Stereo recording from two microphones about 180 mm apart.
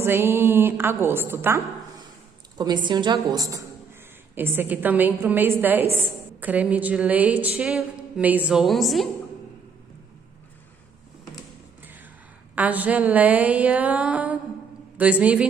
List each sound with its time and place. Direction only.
0.0 s a woman's voice: 15° right (ahead or behind)
2.5 s a woman's voice: 25° right (ahead or behind); by 9.1 s centre (ahead or behind)
12.5 s a woman's voice: 10° right (ahead or behind)